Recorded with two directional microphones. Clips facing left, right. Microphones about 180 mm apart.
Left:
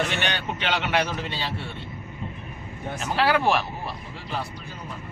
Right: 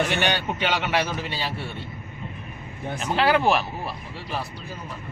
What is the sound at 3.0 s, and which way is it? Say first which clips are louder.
Speech: right 2 dB; centre (ahead or behind).